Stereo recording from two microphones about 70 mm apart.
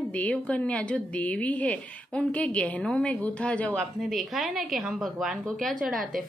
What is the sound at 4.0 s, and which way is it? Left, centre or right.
A woman's voice, centre.